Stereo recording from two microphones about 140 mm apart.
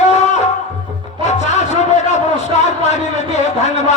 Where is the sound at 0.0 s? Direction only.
55° left (ahead or behind).